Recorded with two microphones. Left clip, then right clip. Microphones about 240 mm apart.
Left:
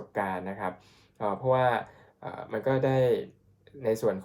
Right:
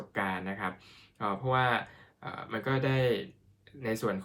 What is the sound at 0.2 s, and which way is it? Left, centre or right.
Speech, right.